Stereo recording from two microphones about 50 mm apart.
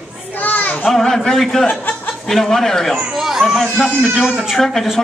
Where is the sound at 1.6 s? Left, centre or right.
Left.